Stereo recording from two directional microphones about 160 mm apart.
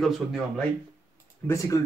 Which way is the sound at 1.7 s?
20° left (ahead or behind).